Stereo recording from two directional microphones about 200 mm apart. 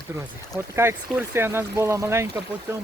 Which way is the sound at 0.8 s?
10° right (ahead or behind).